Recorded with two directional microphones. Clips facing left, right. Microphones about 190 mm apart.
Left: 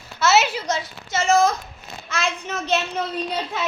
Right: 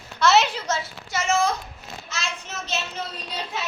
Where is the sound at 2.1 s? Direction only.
55° left (ahead or behind).